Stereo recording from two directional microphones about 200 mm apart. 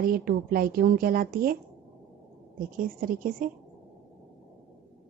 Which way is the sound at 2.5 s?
45° right (ahead or behind).